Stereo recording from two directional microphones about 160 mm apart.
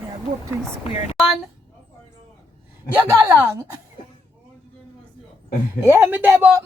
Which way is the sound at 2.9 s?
20° right (ahead or behind).